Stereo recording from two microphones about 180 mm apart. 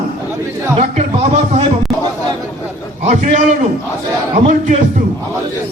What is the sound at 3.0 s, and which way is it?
Speech, 40° right (ahead or behind).